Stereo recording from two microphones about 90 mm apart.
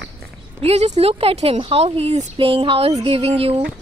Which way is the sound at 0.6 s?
90° right.